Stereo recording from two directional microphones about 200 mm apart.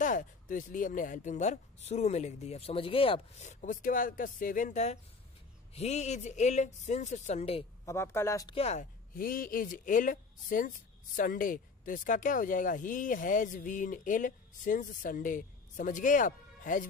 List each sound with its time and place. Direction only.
0.0 s speech: 40° left (ahead or behind)
7.8 s speech: 15° left (ahead or behind)
8.5 s speech: 30° left (ahead or behind)
9.1 s speech: 45° left (ahead or behind)